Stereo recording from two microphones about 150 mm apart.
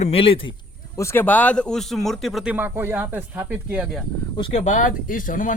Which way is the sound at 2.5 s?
15° right (ahead or behind).